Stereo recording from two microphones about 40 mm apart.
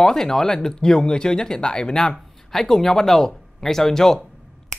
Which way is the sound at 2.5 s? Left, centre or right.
Centre.